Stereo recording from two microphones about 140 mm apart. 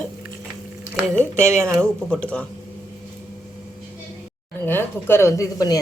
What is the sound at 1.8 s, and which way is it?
Speech, 5° left (ahead or behind).